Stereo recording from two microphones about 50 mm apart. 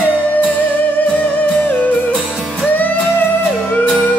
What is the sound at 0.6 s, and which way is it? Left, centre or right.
Music, left.